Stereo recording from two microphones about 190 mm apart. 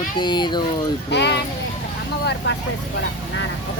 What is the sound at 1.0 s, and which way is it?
Speech, 65° left (ahead or behind).